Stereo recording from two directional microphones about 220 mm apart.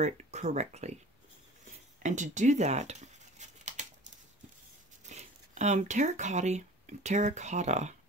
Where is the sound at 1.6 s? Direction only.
35° right (ahead or behind).